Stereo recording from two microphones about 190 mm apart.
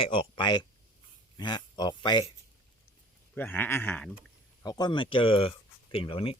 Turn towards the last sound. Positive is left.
turn(degrees=30)  # may be behind; listen again after turning